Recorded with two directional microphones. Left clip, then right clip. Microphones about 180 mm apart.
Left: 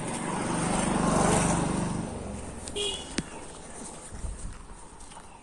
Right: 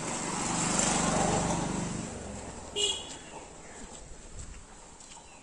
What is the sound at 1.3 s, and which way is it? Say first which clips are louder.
Vehicle: left 4 dB; 65° left (ahead or behind).